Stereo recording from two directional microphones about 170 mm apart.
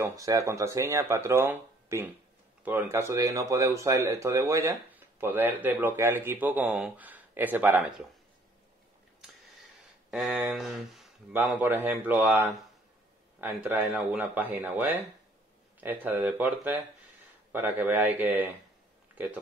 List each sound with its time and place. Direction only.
0.0 s speech: 20° right (ahead or behind)
10.1 s speech: centre (ahead or behind)
11.3 s speech: 10° right (ahead or behind)